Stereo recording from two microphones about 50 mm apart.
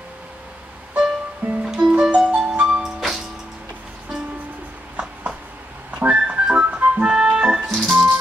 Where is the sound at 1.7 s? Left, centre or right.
Centre.